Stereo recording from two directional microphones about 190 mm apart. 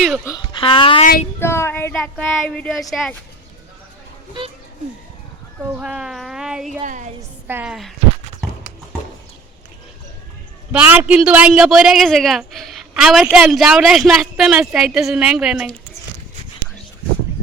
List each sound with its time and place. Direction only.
0.3 s speech: 25° left (ahead or behind)
1.4 s a man's voice: 15° left (ahead or behind)
5.7 s a man's voice: 5° right (ahead or behind)
6.8 s a woman's voice: 40° right (ahead or behind)
7.2 s a woman's voice: 10° right (ahead or behind)
10.7 s a man's voice: 10° right (ahead or behind)